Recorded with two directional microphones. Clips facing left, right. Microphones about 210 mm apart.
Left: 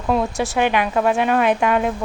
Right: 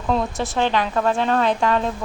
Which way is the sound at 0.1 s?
15° left (ahead or behind).